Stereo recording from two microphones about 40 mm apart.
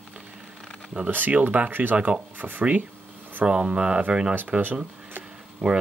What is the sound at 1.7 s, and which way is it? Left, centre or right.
Speech, right.